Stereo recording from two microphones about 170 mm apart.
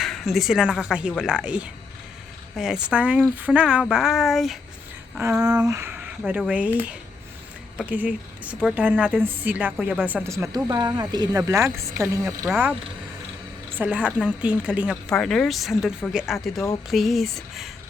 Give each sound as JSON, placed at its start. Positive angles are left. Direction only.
{"t": 0.0, "sound": "a woman's voice", "side_deg": 0}
{"t": 5.6, "sound": "a woman's voice", "side_deg": -15}
{"t": 13.7, "sound": "a woman's voice", "side_deg": -10}